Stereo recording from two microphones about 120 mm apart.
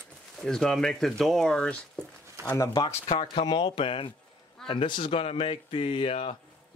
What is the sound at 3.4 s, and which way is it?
Speech, 40° left (ahead or behind).